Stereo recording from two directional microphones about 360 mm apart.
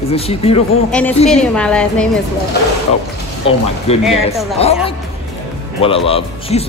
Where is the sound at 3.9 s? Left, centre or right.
Centre.